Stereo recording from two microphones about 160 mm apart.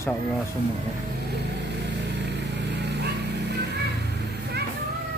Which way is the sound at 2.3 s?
90° right.